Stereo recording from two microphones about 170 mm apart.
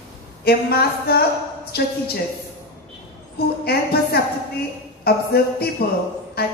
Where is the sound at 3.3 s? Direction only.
65° left (ahead or behind).